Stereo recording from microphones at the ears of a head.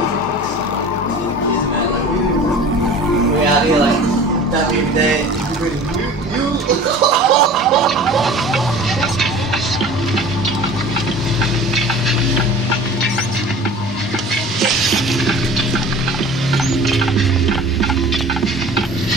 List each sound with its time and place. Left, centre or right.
6.7 s gargling: right
14.6 s stir: right